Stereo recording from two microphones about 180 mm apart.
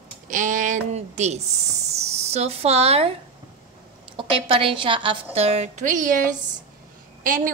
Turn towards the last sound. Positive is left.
turn(degrees=-50)  # may be behind; listen again after turning